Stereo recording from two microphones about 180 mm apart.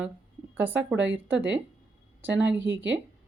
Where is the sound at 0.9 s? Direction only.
90° right.